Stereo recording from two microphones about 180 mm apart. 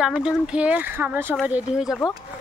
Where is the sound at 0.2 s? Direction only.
5° right (ahead or behind).